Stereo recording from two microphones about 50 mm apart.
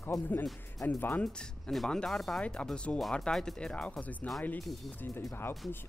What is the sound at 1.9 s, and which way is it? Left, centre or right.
Speech, centre.